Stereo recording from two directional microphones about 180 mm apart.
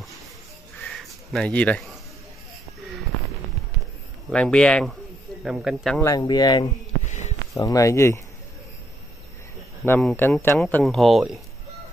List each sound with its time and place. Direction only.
0.8 s a sound: centre (ahead or behind)
4.3 s speech: 5° left (ahead or behind)
5.9 s speech: 20° left (ahead or behind)
7.1 s a sound: 40° left (ahead or behind)
7.5 s speech: 20° left (ahead or behind)
9.8 s speech: 10° left (ahead or behind)